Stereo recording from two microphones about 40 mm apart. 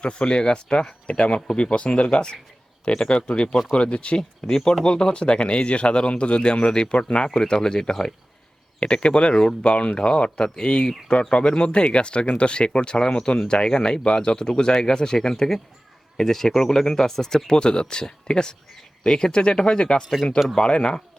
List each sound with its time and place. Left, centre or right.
0.0 s speech: left
4.2 s speech: centre
4.9 s speech: left